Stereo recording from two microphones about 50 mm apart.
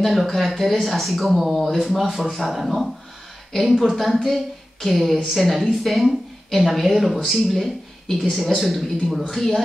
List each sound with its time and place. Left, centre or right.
0.0 s a woman's voice: centre